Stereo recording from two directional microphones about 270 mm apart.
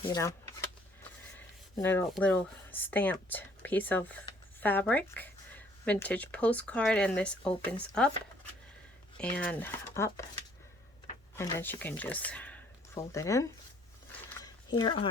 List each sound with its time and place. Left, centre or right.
0.0 s speech: centre
1.7 s speech: centre
9.3 s speech: centre
11.3 s speech: centre
14.4 s a sound: centre